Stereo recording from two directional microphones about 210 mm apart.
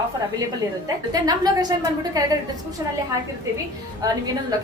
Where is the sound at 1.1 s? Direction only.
20° right (ahead or behind).